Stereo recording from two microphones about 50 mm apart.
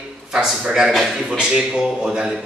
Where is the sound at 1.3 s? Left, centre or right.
Centre.